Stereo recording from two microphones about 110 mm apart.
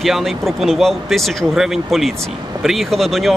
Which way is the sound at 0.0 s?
Centre (ahead or behind).